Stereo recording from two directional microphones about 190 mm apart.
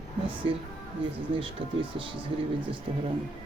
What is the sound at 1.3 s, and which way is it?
Speech, 25° right (ahead or behind).